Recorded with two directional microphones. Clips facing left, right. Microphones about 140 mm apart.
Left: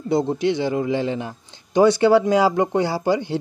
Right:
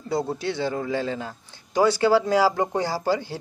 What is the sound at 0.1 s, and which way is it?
A man's voice, 20° left (ahead or behind).